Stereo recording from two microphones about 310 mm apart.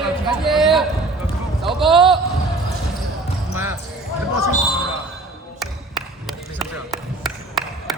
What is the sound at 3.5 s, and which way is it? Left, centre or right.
Basketball bounce, centre.